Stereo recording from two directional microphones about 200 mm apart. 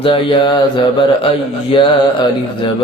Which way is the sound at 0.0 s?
25° left (ahead or behind).